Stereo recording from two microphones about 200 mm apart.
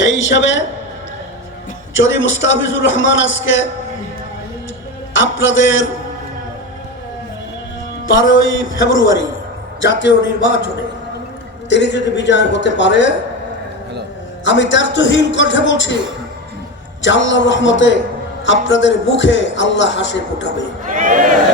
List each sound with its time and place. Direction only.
0.0 s a man's voice: 70° left (ahead or behind)
2.0 s a man's voice: 75° left (ahead or behind)
5.1 s a man's voice: 70° left (ahead or behind)
8.2 s a man's voice: 75° left (ahead or behind)
9.8 s a man's voice: 65° left (ahead or behind)
11.7 s a man's voice: 60° left (ahead or behind)
14.4 s a man's voice: 65° left (ahead or behind)
17.0 s a man's voice: 65° left (ahead or behind)
20.8 s speech: 40° right (ahead or behind)